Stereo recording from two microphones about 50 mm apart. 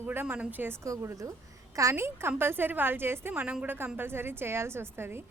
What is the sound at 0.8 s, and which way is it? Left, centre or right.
Speech, right.